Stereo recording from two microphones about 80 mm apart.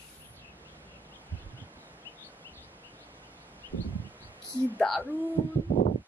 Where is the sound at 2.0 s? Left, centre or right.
Left.